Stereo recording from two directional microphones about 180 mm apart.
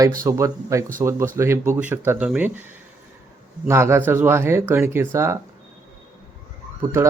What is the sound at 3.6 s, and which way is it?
Speech, 15° right (ahead or behind).